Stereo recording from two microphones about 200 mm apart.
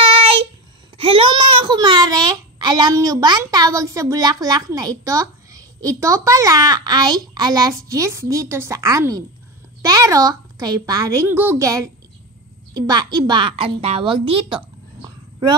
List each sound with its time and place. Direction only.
0.1 s child singing: 30° right (ahead or behind)
0.9 s a child's voice: 25° right (ahead or behind)